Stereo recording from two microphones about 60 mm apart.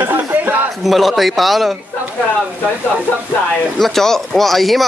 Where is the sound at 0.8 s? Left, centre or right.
Centre.